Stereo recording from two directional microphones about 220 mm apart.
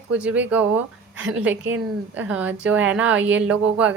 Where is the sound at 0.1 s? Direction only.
5° right (ahead or behind).